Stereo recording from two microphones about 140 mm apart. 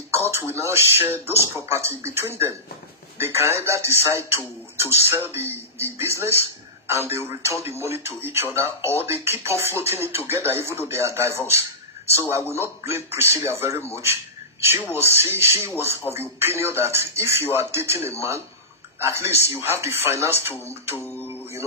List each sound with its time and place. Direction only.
0.7 s a man's voice: 15° right (ahead or behind)